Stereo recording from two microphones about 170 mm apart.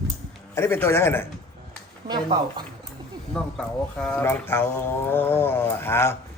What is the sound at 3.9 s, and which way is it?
Speech, 5° left (ahead or behind).